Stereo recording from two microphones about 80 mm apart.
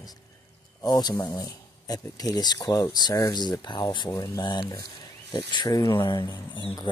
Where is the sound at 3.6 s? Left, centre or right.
Left.